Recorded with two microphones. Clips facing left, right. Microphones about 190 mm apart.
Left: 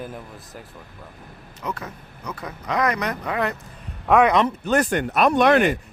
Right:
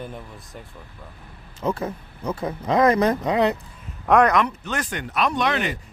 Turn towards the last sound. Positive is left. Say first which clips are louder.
# left 7 dB
turn(degrees=55)  # may be behind; listen again after turning